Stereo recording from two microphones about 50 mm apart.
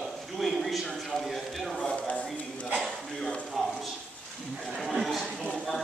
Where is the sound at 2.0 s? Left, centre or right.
Left.